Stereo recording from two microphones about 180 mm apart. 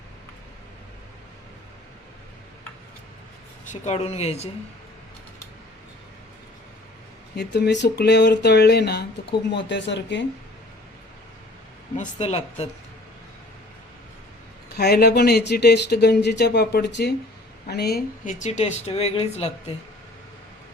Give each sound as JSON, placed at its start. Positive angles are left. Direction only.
{"t": 3.7, "sound": "speech", "side_deg": 35}
{"t": 7.3, "sound": "speech", "side_deg": 70}
{"t": 9.5, "sound": "speech", "side_deg": 80}
{"t": 11.9, "sound": "speech", "side_deg": 35}
{"t": 14.8, "sound": "speech", "side_deg": 65}
{"t": 18.3, "sound": "speech", "side_deg": 45}